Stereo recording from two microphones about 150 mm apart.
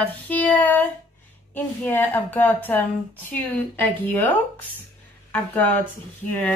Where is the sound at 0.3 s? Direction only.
10° left (ahead or behind).